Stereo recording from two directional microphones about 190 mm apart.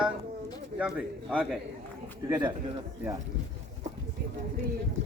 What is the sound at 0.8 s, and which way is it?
Speech, 5° right (ahead or behind).